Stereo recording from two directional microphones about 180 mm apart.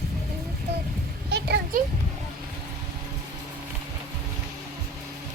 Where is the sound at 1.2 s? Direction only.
65° right (ahead or behind).